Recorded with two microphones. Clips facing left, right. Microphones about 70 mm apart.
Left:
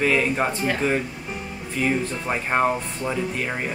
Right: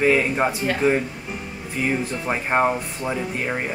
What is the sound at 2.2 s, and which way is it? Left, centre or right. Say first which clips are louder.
Speech: right 3 dB; centre.